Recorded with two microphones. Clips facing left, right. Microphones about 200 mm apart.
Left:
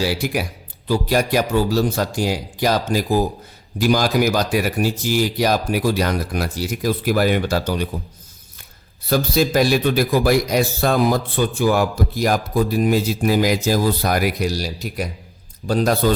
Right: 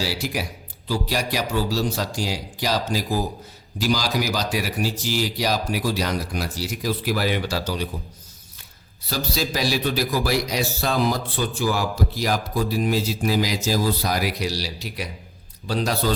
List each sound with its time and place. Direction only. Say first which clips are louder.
0.0 s a man's voice: left 5 dB; 55° left (ahead or behind)
9.0 s a man's voice: left 8 dB; 55° left (ahead or behind)